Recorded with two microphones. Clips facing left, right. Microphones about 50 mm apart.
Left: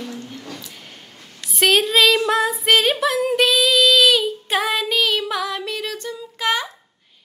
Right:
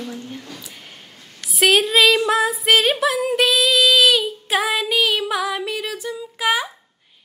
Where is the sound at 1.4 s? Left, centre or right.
Centre.